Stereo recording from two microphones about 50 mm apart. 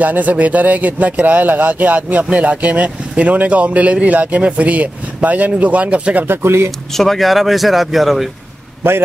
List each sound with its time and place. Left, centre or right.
0.0 s speech: right
6.2 s speech: right
6.9 s speech: centre